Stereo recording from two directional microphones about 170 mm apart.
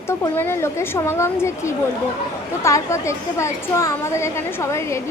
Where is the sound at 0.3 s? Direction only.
15° left (ahead or behind).